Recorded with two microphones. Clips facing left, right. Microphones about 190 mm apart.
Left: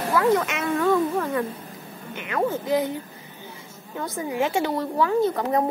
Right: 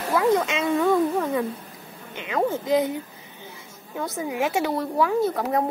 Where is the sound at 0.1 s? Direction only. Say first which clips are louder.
Even; 15° right (ahead or behind).